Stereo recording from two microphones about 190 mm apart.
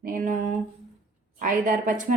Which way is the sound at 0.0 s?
45° right (ahead or behind).